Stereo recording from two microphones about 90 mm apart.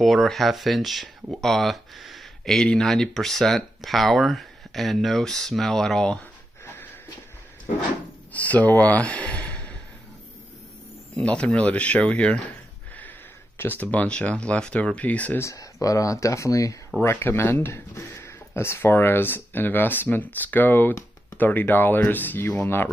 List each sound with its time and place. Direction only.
0.0 s speech: centre (ahead or behind)
6.6 s a sound: 25° left (ahead or behind)
8.3 s speech: 15° left (ahead or behind)
11.1 s speech: 10° left (ahead or behind)
13.6 s speech: 20° left (ahead or behind)
15.4 s speech: 40° left (ahead or behind)
17.0 s speech: 25° left (ahead or behind)